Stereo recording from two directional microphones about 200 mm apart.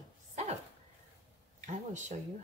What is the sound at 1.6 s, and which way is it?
Speech, 40° right (ahead or behind).